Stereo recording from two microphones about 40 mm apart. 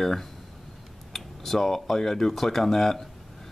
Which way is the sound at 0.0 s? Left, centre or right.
Centre.